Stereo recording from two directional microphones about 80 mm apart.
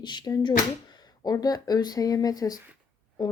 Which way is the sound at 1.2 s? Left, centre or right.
Left.